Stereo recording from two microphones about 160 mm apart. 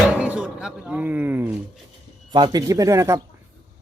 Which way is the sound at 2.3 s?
25° right (ahead or behind).